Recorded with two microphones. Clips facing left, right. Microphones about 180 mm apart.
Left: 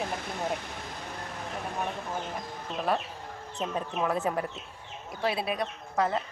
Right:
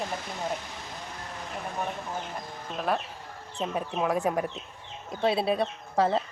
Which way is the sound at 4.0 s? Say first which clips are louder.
Right 2 dB; 15° right (ahead or behind).